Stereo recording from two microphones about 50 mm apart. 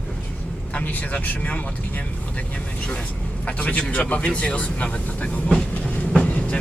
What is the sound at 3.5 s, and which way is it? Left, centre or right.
Speech, left.